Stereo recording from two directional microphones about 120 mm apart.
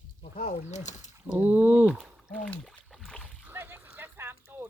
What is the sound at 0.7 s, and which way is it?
Speech, 75° left (ahead or behind).